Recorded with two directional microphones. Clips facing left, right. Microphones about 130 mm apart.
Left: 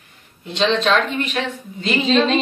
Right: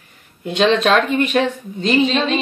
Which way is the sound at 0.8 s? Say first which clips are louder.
Right 3 dB; 45° right (ahead or behind).